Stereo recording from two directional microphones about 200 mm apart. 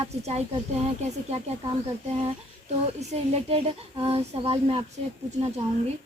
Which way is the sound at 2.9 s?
35° right (ahead or behind).